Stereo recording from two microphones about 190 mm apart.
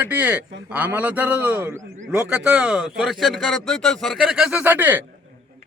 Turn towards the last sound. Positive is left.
turn(degrees=-10)  # may be behind; listen again after turning